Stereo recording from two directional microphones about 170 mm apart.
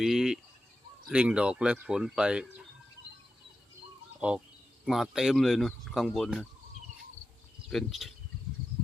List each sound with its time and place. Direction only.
0.0 s speech: centre (ahead or behind)
4.2 s speech: 10° right (ahead or behind)
7.7 s speech: centre (ahead or behind)